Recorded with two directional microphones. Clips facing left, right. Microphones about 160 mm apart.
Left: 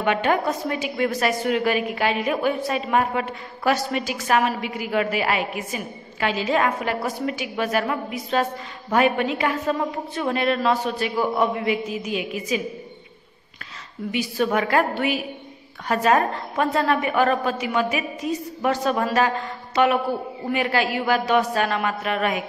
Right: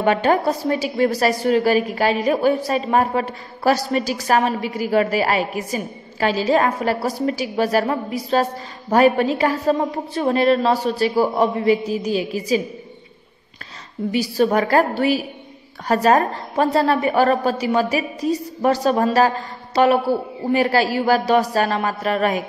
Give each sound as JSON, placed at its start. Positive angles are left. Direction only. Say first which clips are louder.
{"t": 0.0, "sound": "a woman's voice", "louder": "right 4 dB", "side_deg": -35}
{"t": 14.1, "sound": "a woman's voice", "louder": "right 4 dB", "side_deg": -35}